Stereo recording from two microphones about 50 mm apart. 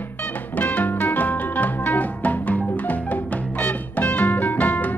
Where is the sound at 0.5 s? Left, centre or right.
Left.